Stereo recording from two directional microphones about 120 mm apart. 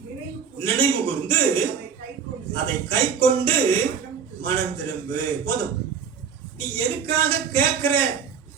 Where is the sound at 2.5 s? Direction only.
45° right (ahead or behind).